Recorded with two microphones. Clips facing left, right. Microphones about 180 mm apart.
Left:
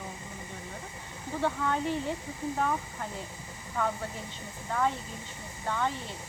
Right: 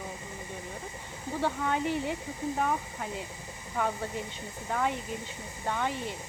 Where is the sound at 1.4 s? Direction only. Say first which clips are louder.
Even; 15° right (ahead or behind).